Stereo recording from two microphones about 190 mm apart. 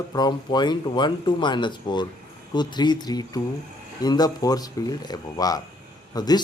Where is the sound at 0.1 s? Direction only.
20° left (ahead or behind).